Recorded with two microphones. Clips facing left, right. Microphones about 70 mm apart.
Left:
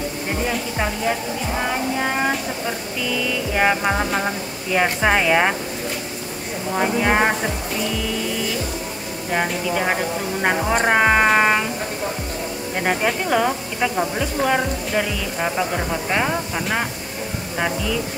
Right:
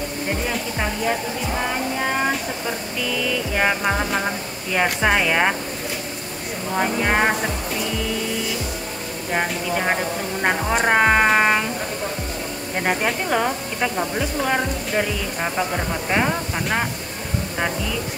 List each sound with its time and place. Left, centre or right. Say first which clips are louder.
3.5 s speech: left 2 dB; centre
6.8 s speech: left 2 dB; centre
9.3 s speech: left 1 dB; centre
12.8 s speech: left 1 dB; centre